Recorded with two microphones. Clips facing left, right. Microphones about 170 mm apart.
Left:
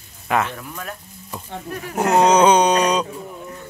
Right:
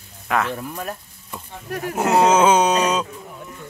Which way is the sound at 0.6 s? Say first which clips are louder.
Right 3 dB; 35° right (ahead or behind).